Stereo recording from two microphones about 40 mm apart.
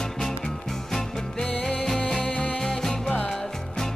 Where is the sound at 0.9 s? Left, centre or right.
Centre.